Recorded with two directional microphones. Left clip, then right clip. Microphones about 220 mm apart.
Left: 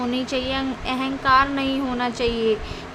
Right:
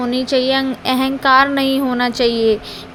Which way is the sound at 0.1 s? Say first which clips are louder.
Right 9 dB; 20° right (ahead or behind).